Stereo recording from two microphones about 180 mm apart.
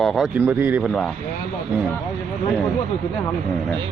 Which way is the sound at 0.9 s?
Centre (ahead or behind).